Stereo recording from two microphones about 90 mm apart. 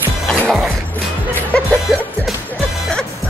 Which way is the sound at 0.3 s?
15° left (ahead or behind).